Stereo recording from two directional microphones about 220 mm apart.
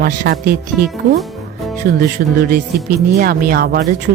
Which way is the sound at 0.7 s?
5° right (ahead or behind).